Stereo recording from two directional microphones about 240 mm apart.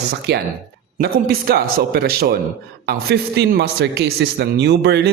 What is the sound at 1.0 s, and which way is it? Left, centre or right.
A man's voice, right.